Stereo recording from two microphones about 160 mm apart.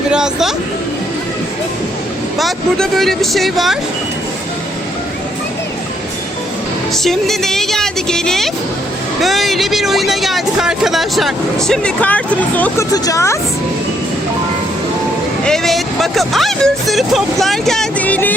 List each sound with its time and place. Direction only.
0.1 s speech: 5° right (ahead or behind)
2.4 s speech: centre (ahead or behind)
6.9 s speech: centre (ahead or behind)
12.9 s a woman's voice: 20° left (ahead or behind)
15.4 s speech: centre (ahead or behind)